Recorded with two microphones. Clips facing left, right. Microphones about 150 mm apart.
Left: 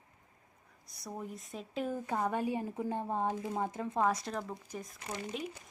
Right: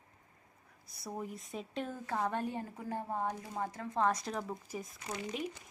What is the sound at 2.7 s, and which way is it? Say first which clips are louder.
Speech: left 3 dB; 20° left (ahead or behind).